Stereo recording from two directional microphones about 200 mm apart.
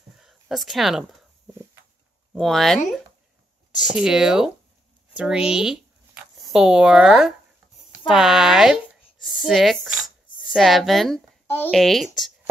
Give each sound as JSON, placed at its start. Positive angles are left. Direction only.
{"t": 0.2, "sound": "a sound", "side_deg": 0}
{"t": 2.3, "sound": "a woman's voice", "side_deg": 0}
{"t": 11.7, "sound": "a woman's voice", "side_deg": 0}